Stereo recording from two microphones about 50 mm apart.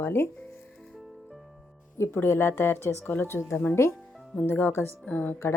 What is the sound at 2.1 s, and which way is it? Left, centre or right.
Speech, left.